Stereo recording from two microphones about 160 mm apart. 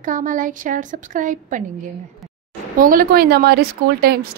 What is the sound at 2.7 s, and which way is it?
Speech, 60° right (ahead or behind).